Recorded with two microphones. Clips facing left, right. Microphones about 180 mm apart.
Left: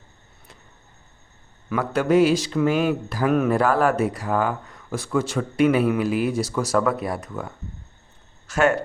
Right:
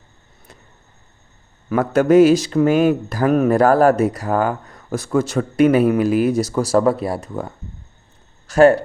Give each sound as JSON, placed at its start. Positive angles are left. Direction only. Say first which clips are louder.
{"t": 1.7, "sound": "speech", "louder": "right 6 dB", "side_deg": -45}